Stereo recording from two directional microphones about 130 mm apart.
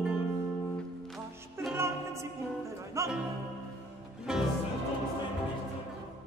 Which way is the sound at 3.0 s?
25° right (ahead or behind).